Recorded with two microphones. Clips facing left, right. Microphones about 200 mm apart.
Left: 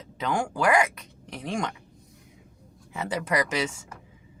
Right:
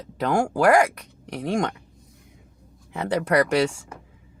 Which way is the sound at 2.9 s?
60° right (ahead or behind).